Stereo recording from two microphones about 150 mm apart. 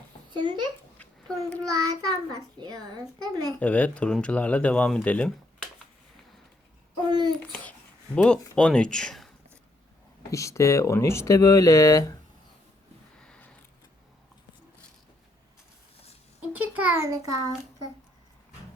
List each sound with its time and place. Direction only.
0.3 s a child's voice: 30° right (ahead or behind)
1.7 s a child's voice: 25° right (ahead or behind)
3.6 s speech: 10° left (ahead or behind)
7.1 s a child's voice: 30° right (ahead or behind)
7.6 s speech: 10° left (ahead or behind)
10.3 s speech: 20° left (ahead or behind)
13.2 s a sound: 5° left (ahead or behind)
16.5 s a child's voice: 10° right (ahead or behind)